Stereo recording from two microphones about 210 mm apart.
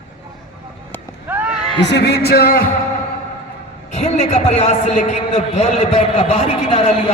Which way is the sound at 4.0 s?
30° left (ahead or behind).